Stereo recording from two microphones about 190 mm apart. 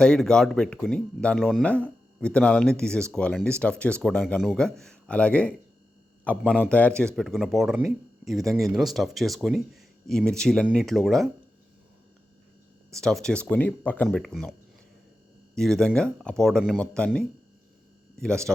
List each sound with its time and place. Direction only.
0.0 s speech: 5° left (ahead or behind)
6.4 s a man's voice: 5° right (ahead or behind)
6.7 s speech: 5° left (ahead or behind)
12.9 s speech: centre (ahead or behind)
15.5 s speech: 5° left (ahead or behind)